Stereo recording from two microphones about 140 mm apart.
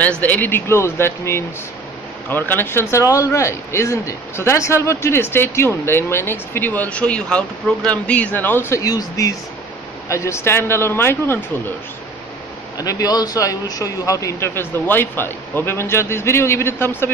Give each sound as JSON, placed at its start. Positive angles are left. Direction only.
{"t": 0.2, "sound": "speech", "side_deg": 10}
{"t": 12.7, "sound": "a man's voice", "side_deg": 25}